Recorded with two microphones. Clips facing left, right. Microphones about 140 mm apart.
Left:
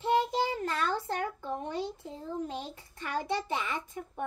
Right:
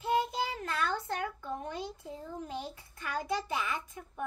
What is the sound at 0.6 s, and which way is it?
A child's voice, 30° left (ahead or behind).